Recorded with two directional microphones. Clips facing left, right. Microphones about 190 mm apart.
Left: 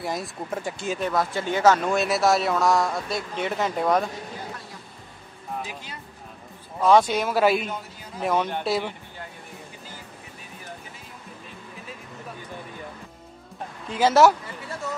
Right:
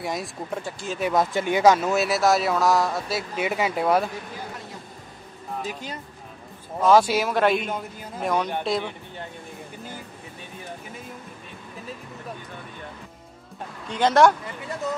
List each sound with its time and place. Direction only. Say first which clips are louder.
0.0 s speech: even; centre (ahead or behind)
0.7 s speech: left 3 dB; 15° left (ahead or behind)
1.1 s speech: right 6 dB; 15° right (ahead or behind)
5.7 s speech: right 6 dB; 40° right (ahead or behind)
6.8 s speech: right 1 dB; 5° right (ahead or behind)
13.8 s speech: even; 5° left (ahead or behind)